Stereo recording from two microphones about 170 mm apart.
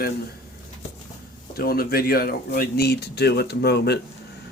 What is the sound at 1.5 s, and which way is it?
Speech, 65° left (ahead or behind).